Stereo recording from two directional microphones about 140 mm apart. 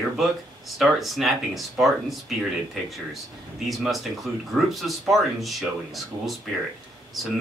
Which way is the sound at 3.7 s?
Centre (ahead or behind).